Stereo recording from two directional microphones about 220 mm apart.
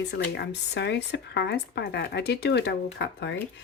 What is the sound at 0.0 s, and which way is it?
Speech, 50° left (ahead or behind).